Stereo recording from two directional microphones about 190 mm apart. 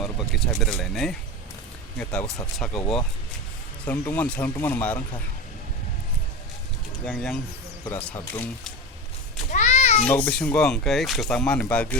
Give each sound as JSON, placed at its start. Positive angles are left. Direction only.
{"t": 0.0, "sound": "speech", "side_deg": 0}
{"t": 7.0, "sound": "speech", "side_deg": 5}
{"t": 9.5, "sound": "a sound", "side_deg": 40}
{"t": 10.1, "sound": "speech", "side_deg": 10}